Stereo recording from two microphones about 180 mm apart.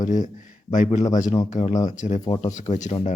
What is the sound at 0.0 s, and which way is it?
Speech, 45° left (ahead or behind).